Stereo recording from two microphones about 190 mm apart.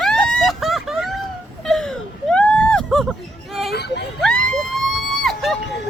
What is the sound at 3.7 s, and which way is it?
Speech, 60° left (ahead or behind).